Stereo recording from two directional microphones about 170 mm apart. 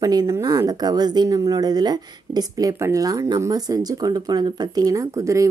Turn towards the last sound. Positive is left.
turn(degrees=-20)  # may be behind; listen again after turning